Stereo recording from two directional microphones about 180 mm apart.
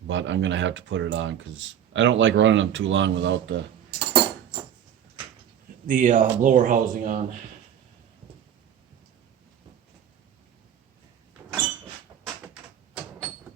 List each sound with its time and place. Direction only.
0.1 s speech: 90° right
3.9 s a sound: 30° right (ahead or behind)
5.8 s speech: 45° right (ahead or behind)
11.4 s cupboard open or close: 10° right (ahead or behind)